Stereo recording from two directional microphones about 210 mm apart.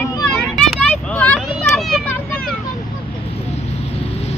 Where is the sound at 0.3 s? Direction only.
5° left (ahead or behind).